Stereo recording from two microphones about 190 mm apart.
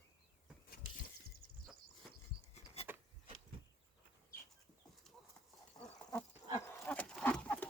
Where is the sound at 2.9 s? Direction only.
10° right (ahead or behind).